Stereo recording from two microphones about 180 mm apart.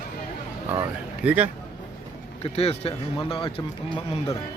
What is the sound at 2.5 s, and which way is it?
Speech, 35° left (ahead or behind).